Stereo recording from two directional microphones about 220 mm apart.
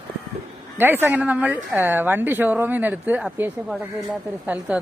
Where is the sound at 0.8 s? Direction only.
10° right (ahead or behind).